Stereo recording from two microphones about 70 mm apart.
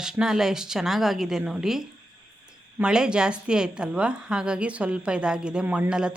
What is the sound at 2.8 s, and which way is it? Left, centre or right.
A woman's voice, centre.